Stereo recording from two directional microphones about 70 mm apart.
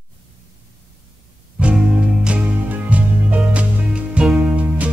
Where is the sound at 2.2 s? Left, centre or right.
Centre.